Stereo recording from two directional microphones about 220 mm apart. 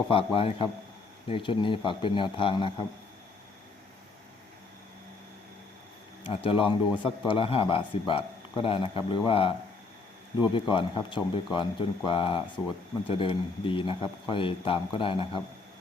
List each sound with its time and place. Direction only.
0.1 s speech: 25° left (ahead or behind)
6.2 s speech: 25° left (ahead or behind)